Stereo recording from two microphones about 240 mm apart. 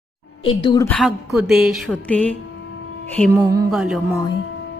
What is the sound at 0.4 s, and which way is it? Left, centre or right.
Speech, centre.